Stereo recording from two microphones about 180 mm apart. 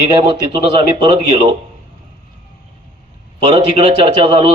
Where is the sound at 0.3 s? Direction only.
30° right (ahead or behind).